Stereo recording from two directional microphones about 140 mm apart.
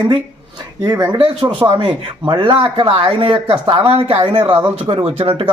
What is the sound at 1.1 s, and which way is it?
A man's voice, 35° right (ahead or behind).